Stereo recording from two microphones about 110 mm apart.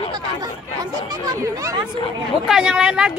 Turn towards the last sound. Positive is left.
turn(degrees=-5)  # may be behind; listen again after turning